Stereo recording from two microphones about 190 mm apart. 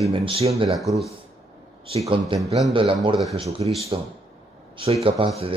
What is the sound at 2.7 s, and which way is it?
Speech, 25° right (ahead or behind).